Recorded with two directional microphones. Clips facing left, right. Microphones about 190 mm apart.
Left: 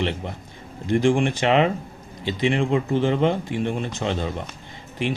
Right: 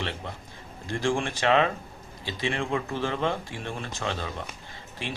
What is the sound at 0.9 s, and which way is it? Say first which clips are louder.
Speech: left 8 dB; 20° left (ahead or behind).